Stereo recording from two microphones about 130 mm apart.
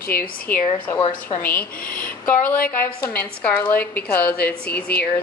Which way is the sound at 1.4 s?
15° left (ahead or behind).